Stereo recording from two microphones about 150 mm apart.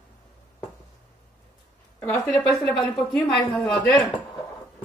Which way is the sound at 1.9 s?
10° left (ahead or behind).